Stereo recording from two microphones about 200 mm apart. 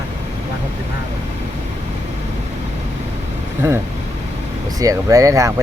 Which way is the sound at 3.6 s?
15° right (ahead or behind).